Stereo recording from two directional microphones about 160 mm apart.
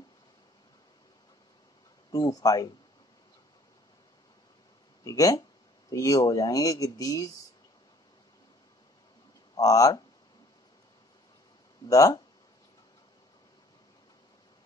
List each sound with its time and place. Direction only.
2.0 s speech: 25° left (ahead or behind)
5.0 s speech: 20° left (ahead or behind)
9.6 s speech: 20° left (ahead or behind)
11.9 s speech: 20° left (ahead or behind)